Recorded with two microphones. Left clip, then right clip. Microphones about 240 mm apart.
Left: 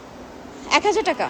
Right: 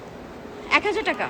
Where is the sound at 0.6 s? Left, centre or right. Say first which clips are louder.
Left 3 dB; centre.